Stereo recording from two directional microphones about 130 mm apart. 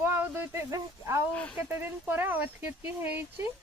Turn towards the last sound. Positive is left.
turn(degrees=-15)  # may be behind; listen again after turning